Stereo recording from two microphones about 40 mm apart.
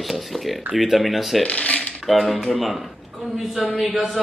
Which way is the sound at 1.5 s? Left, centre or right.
Left.